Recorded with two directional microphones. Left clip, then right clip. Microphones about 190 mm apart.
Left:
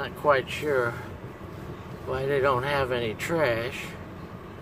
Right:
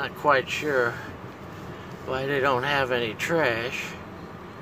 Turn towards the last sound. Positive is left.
turn(degrees=-15)  # may be behind; listen again after turning